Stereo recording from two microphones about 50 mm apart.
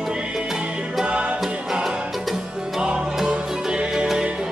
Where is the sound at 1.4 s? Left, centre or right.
Centre.